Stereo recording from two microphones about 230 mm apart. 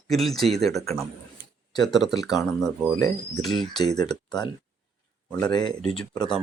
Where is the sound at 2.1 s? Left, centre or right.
Centre.